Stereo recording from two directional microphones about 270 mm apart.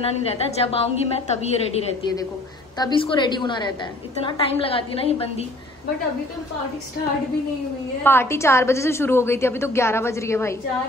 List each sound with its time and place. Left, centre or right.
0.0 s a woman's voice: left
8.0 s a woman's voice: centre